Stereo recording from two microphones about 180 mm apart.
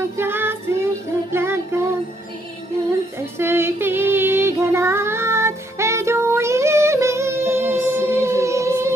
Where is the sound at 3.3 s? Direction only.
15° right (ahead or behind).